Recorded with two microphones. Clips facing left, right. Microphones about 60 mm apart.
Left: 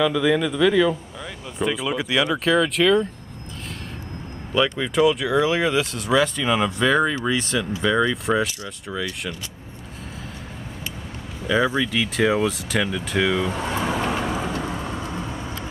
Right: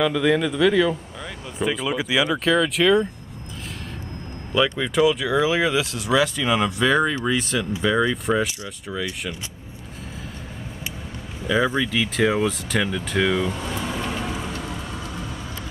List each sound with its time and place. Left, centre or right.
0.0 s speech: centre
4.7 s speech: centre
11.4 s speech: centre
13.5 s vehicle: left